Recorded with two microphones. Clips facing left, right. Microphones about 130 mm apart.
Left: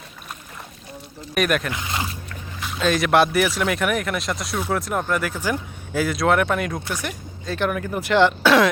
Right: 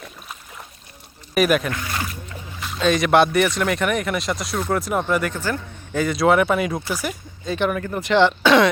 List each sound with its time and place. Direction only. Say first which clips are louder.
1.3 s speech: right 3 dB; centre (ahead or behind)
1.7 s speech: even; 20° left (ahead or behind)
2.6 s speech: right 2 dB; centre (ahead or behind)